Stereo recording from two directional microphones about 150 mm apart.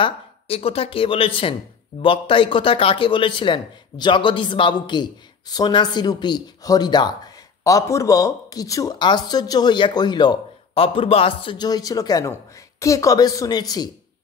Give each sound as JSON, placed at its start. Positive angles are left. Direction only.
{"t": 0.0, "sound": "a man's voice", "side_deg": 40}